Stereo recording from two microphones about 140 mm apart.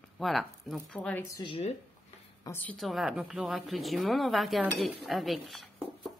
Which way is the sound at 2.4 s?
15° left (ahead or behind).